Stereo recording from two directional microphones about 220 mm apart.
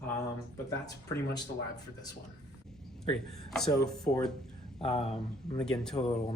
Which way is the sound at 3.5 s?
5° left (ahead or behind).